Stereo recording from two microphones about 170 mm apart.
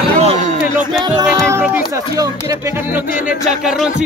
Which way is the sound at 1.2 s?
15° right (ahead or behind).